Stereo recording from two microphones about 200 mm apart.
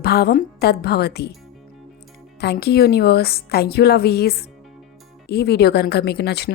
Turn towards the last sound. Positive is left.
turn(degrees=55)  # may be behind; listen again after turning